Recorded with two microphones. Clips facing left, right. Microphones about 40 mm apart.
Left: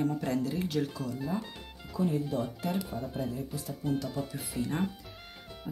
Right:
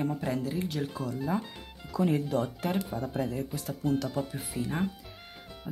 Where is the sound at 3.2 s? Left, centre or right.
Right.